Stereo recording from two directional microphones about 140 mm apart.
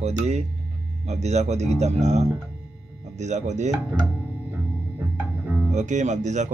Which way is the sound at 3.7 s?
25° right (ahead or behind).